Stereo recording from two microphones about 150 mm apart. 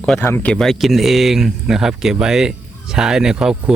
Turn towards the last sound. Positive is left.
turn(degrees=-5)  # may be behind; listen again after turning